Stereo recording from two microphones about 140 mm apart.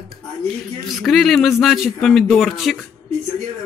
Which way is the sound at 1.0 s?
Centre (ahead or behind).